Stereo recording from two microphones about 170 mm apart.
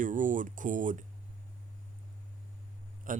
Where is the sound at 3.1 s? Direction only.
50° right (ahead or behind).